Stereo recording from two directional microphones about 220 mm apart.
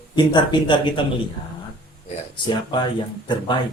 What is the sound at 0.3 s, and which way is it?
Speech, 20° left (ahead or behind).